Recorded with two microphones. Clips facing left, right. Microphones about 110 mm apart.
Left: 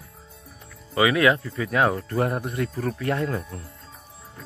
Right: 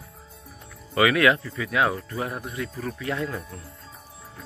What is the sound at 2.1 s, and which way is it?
Speech, 50° left (ahead or behind).